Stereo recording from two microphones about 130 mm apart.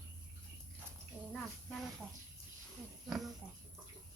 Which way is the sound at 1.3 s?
5° left (ahead or behind).